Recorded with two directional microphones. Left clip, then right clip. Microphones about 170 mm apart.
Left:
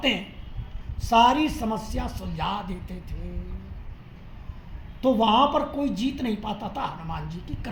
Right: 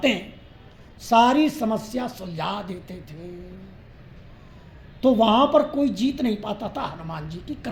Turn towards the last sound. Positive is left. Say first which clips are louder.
# right 4 dB
turn(degrees=-50)  # may be behind; listen again after turning